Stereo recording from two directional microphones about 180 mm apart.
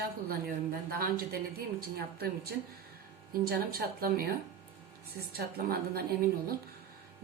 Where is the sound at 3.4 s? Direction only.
60° right (ahead or behind).